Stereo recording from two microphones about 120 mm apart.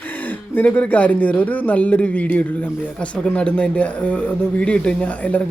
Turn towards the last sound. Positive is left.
turn(degrees=10)  # may be behind; listen again after turning